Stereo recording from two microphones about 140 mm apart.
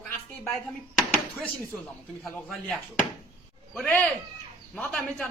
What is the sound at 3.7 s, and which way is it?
A man's voice, 5° left (ahead or behind).